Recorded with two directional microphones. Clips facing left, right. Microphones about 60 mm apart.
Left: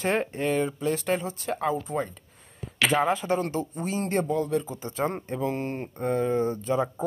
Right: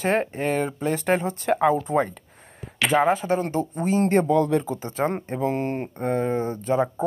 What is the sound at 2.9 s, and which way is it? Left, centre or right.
Speech, right.